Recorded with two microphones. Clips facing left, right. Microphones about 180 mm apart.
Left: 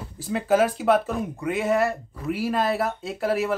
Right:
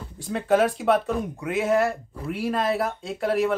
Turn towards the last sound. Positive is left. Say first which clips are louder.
# right 1 dB
turn(degrees=0)  # may be behind; listen again after turning